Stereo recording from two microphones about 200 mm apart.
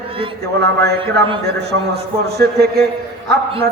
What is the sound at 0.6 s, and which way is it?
A man's voice, 55° right (ahead or behind).